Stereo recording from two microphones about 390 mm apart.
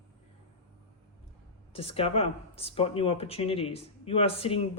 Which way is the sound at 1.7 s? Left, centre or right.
Centre.